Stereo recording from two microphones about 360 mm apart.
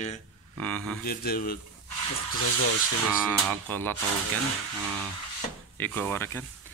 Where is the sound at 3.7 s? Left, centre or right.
Centre.